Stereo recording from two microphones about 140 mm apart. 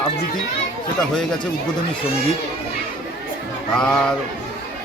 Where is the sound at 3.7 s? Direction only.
5° left (ahead or behind).